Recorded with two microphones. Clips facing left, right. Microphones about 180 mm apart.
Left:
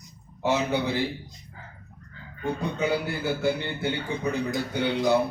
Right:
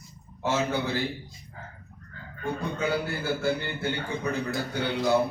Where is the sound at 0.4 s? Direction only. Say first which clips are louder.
Left 2 dB; 15° left (ahead or behind).